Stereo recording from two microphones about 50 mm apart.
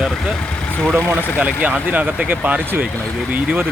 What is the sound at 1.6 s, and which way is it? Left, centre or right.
Speech, right.